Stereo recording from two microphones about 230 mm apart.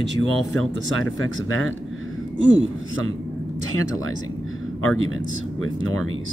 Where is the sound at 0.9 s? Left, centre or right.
Left.